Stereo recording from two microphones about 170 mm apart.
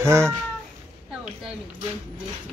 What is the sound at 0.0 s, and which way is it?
Speech, 15° right (ahead or behind).